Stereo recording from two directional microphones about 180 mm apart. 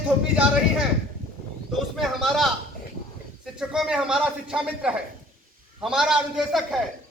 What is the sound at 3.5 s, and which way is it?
A man's voice, 5° right (ahead or behind).